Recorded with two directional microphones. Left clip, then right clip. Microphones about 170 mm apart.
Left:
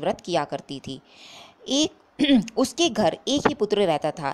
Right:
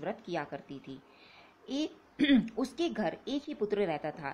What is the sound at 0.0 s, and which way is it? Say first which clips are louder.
Speech: left 12 dB; 35° left (ahead or behind).